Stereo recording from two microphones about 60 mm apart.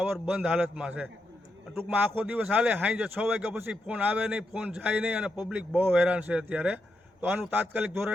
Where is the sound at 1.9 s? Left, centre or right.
Right.